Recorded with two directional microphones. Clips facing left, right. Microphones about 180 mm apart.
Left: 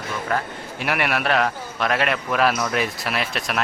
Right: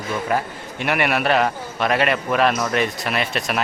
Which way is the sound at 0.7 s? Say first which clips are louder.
Right 3 dB; centre (ahead or behind).